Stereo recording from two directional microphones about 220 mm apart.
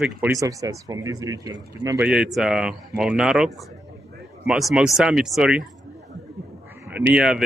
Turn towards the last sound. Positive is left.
turn(degrees=-5)  # may be behind; listen again after turning